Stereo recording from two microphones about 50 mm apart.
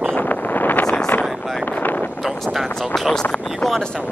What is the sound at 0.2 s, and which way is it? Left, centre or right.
Vehicle, left.